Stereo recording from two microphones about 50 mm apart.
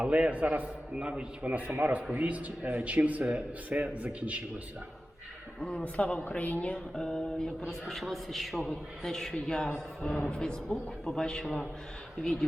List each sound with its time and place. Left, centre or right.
0.0 s speech: right
5.7 s a woman's voice: left
6.9 s a man's voice: centre